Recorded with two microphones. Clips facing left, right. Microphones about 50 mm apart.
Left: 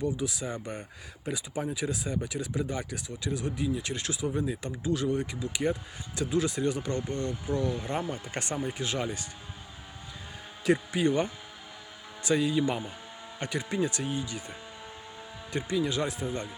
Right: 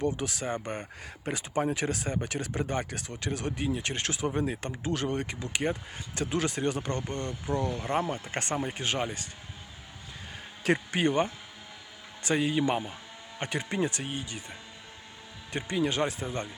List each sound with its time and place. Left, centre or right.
0.0 s speech: right
10.6 s speech: right
12.2 s speech: right
15.5 s speech: right